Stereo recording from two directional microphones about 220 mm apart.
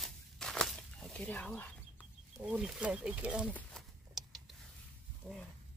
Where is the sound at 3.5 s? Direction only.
Centre (ahead or behind).